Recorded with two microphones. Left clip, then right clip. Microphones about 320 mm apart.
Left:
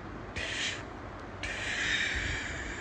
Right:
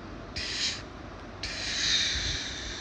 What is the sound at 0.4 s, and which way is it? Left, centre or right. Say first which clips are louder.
Owl: right 2 dB; right.